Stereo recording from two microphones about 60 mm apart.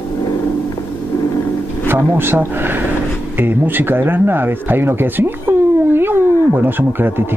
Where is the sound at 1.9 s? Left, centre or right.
Right.